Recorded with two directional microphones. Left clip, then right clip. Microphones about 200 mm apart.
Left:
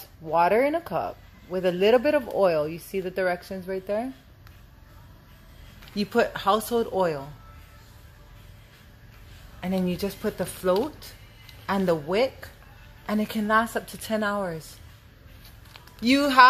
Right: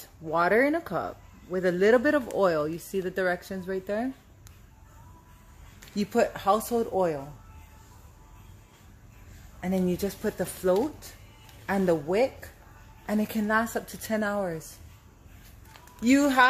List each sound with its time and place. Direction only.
0.3 s speech: 20° right (ahead or behind)
6.1 s a woman's voice: 5° right (ahead or behind)
9.6 s a woman's voice: 15° right (ahead or behind)
16.0 s a woman's voice: 15° right (ahead or behind)